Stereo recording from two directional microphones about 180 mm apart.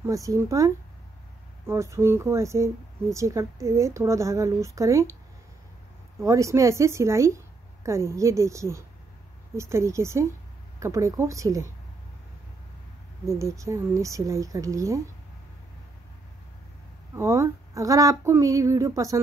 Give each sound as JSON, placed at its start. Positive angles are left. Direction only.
{"t": 0.0, "sound": "speech", "side_deg": -15}
{"t": 1.7, "sound": "speech", "side_deg": -15}
{"t": 6.2, "sound": "speech", "side_deg": -15}
{"t": 13.2, "sound": "speech", "side_deg": -15}
{"t": 17.1, "sound": "speech", "side_deg": -15}